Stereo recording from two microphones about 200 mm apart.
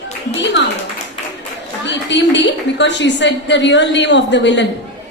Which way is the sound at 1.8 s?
60° left (ahead or behind).